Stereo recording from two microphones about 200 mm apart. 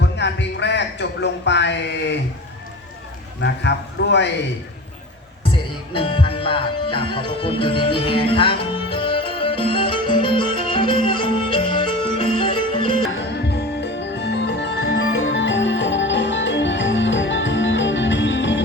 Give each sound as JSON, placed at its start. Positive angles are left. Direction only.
{"t": 0.0, "sound": "speech", "side_deg": 60}
{"t": 3.4, "sound": "speech", "side_deg": 60}
{"t": 5.9, "sound": "music", "side_deg": 25}
{"t": 13.1, "sound": "music", "side_deg": 55}